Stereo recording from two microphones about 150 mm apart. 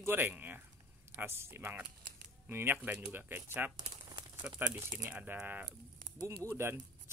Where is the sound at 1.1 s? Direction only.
15° right (ahead or behind).